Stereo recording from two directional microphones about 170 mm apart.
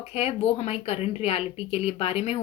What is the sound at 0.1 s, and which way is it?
Speech, 35° left (ahead or behind).